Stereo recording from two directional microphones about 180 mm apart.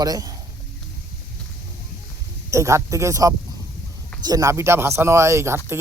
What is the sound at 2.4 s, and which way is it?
Speech, 15° right (ahead or behind).